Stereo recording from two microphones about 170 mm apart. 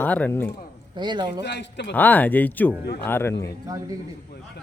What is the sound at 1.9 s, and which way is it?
Speech, 10° left (ahead or behind).